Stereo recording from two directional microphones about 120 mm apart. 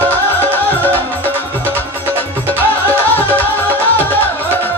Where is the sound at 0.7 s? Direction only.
15° left (ahead or behind).